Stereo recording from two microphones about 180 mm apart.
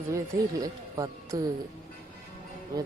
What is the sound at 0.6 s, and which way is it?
Speech, 20° right (ahead or behind).